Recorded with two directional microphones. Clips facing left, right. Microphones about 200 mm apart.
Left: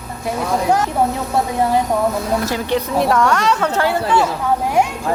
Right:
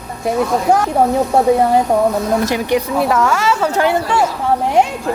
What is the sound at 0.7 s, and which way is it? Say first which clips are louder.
Speech: right 3 dB; 50° right (ahead or behind).